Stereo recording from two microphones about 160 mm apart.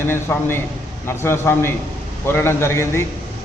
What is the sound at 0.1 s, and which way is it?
A man's voice, 15° left (ahead or behind).